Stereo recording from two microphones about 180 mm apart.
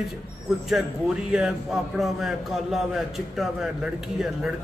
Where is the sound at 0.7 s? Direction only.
5° right (ahead or behind).